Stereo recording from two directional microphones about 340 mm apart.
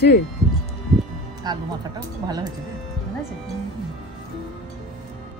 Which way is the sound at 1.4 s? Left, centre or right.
Centre.